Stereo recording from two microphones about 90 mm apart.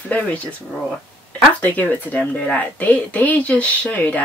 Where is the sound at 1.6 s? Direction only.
15° left (ahead or behind).